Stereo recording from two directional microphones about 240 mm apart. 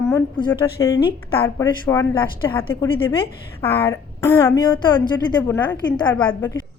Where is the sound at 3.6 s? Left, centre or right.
Centre.